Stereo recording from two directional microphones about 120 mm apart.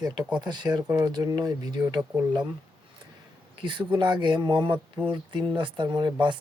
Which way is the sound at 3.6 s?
45° right (ahead or behind).